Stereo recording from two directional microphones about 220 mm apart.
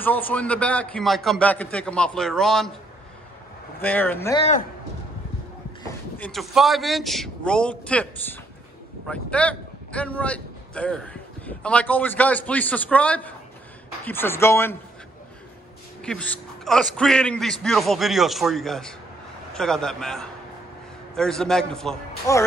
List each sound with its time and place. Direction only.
0.0 s a man's voice: 5° left (ahead or behind)
3.8 s a man's voice: 10° left (ahead or behind)
4.4 s speech: 30° left (ahead or behind)
6.1 s a man's voice: 5° left (ahead or behind)
16.0 s a man's voice: 5° left (ahead or behind)
22.3 s a man's voice: 15° left (ahead or behind)